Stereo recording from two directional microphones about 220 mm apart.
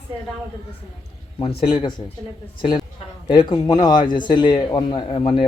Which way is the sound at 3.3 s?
20° left (ahead or behind).